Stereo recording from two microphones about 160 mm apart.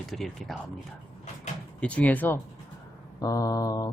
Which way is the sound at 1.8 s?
10° left (ahead or behind).